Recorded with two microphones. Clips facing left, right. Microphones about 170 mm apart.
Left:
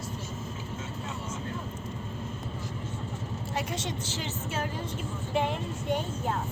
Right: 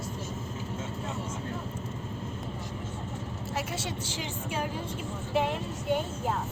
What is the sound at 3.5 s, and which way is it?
A woman's voice, 10° right (ahead or behind).